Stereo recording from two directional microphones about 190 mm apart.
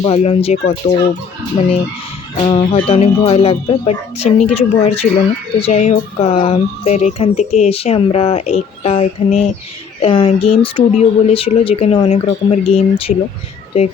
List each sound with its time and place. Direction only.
0.0 s speech: 30° left (ahead or behind)
2.4 s music: 25° left (ahead or behind)
2.7 s speech: 35° left (ahead or behind)